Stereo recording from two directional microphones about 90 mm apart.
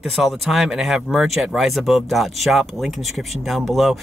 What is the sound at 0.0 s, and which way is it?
Speech, centre (ahead or behind).